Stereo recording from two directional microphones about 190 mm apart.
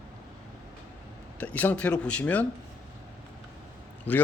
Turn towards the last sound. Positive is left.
turn(degrees=10)  # may be behind; listen again after turning